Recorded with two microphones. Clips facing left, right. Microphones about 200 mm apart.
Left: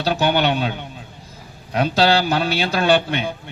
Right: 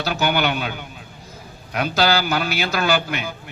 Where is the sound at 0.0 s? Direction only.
30° left (ahead or behind).